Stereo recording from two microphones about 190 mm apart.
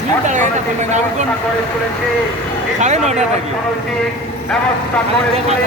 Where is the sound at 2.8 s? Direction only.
35° right (ahead or behind).